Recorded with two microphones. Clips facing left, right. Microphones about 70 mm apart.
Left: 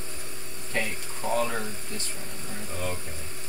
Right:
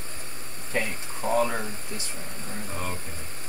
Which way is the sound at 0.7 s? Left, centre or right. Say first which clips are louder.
Right 2 dB; centre.